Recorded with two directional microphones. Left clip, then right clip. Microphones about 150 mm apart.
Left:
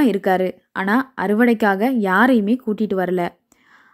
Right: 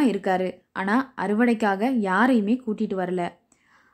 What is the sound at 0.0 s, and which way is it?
A woman's voice, 30° left (ahead or behind).